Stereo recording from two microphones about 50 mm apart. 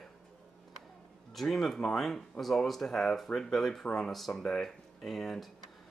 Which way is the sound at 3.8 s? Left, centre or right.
Left.